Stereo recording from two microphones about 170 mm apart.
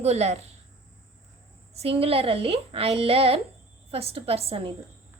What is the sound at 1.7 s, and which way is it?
A woman's voice, 35° right (ahead or behind).